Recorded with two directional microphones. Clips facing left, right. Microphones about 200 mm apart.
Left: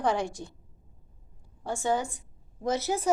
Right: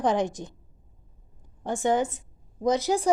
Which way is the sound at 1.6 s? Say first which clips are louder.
Right 4 dB; 20° right (ahead or behind).